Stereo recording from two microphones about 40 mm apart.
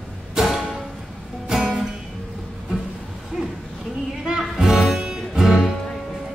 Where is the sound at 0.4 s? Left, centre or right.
Centre.